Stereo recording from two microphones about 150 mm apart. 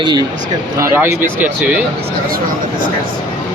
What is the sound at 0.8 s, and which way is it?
Speech, 15° right (ahead or behind).